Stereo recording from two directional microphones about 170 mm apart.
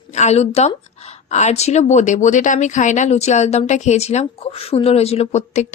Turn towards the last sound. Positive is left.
turn(degrees=45)  # may be behind; listen again after turning